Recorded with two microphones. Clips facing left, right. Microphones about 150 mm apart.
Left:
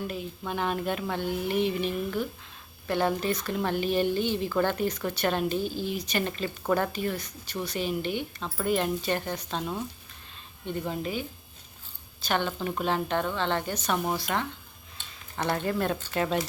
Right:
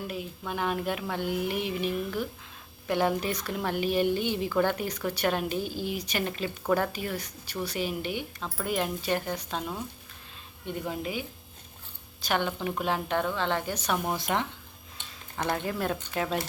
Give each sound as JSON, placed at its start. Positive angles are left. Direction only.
{"t": 0.1, "sound": "speech", "side_deg": -5}
{"t": 15.5, "sound": "speech", "side_deg": -5}